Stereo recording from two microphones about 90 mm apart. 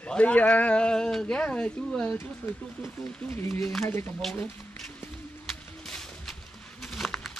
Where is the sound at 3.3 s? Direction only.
30° left (ahead or behind).